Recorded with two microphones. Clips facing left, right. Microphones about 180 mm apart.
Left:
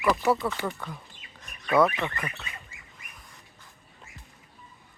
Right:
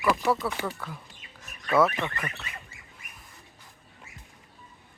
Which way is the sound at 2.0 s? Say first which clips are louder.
Even; 15° left (ahead or behind).